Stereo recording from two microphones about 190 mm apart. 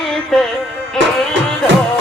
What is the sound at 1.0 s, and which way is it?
Music, 75° right (ahead or behind).